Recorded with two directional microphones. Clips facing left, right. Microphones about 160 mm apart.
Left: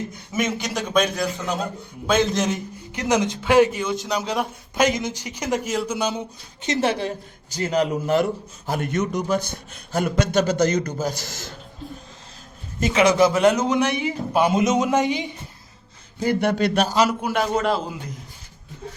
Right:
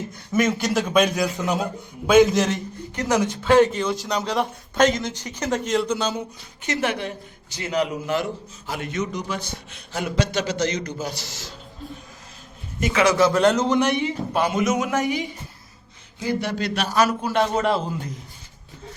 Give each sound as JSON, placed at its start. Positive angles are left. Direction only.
{"t": 0.3, "sound": "a man's voice", "side_deg": 0}
{"t": 2.9, "sound": "speech", "side_deg": 20}
{"t": 3.8, "sound": "a man's voice", "side_deg": 0}
{"t": 4.9, "sound": "speech", "side_deg": 15}
{"t": 6.7, "sound": "a woman's voice", "side_deg": 30}
{"t": 12.9, "sound": "a man's voice", "side_deg": 20}
{"t": 13.3, "sound": "a man's voice", "side_deg": 5}
{"t": 14.5, "sound": "a man's voice", "side_deg": 25}
{"t": 16.2, "sound": "a man's voice", "side_deg": 55}
{"t": 16.9, "sound": "a man's voice", "side_deg": 20}
{"t": 17.3, "sound": "a man's voice", "side_deg": 0}